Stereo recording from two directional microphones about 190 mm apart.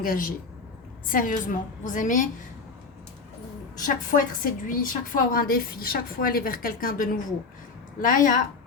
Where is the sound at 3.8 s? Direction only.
45° left (ahead or behind).